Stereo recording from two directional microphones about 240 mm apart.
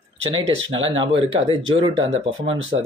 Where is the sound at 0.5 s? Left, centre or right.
Right.